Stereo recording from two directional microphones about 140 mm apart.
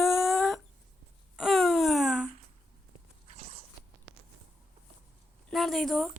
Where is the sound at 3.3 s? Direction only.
50° right (ahead or behind).